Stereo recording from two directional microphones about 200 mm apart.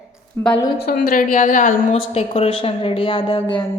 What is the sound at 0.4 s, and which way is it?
Speech, 10° left (ahead or behind).